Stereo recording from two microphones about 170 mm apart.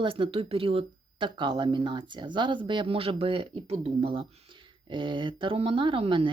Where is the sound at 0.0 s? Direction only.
30° right (ahead or behind).